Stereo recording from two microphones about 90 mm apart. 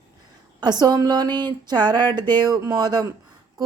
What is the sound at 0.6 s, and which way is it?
Speech, 50° right (ahead or behind).